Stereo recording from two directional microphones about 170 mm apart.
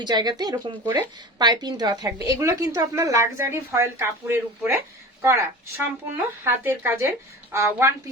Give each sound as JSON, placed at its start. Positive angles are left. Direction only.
{"t": 0.0, "sound": "a woman's voice", "side_deg": -25}